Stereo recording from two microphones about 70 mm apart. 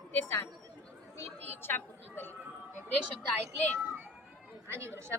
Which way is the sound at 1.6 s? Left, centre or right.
Left.